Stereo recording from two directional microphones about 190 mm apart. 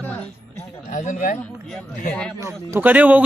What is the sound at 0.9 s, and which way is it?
Speech, 40° left (ahead or behind).